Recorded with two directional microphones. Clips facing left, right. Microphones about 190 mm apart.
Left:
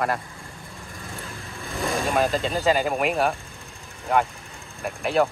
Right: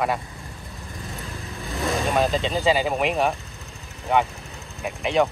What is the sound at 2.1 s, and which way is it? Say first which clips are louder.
Speech: even; centre (ahead or behind).